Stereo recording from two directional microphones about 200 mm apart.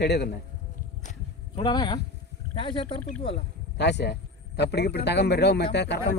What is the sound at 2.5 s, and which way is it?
Speech, 25° left (ahead or behind).